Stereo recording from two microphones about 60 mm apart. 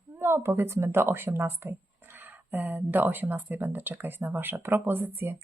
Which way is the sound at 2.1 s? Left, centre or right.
Right.